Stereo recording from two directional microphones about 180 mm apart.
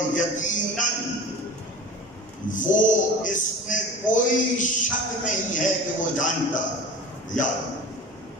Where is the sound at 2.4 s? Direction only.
45° left (ahead or behind).